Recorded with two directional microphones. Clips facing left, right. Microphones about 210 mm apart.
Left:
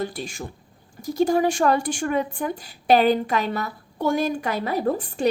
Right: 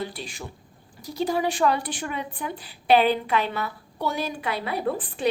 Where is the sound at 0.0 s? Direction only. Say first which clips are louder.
Left 4 dB; 45° left (ahead or behind).